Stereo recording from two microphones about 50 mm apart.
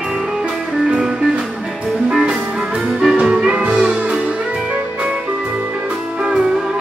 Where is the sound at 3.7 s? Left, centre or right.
Centre.